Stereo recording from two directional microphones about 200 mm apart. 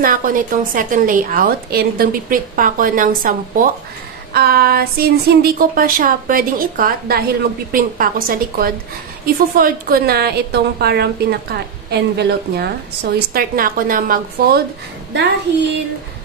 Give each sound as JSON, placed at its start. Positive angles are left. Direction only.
{"t": 0.0, "sound": "a woman's voice", "side_deg": -45}